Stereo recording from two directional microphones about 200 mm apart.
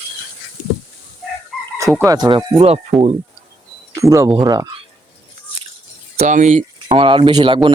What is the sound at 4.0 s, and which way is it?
Speech, 15° right (ahead or behind).